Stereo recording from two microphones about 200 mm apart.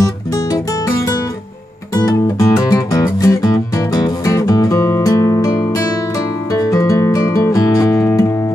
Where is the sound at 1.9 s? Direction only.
15° left (ahead or behind).